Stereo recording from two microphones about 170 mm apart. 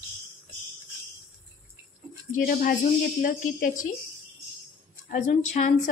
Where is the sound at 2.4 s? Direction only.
55° left (ahead or behind).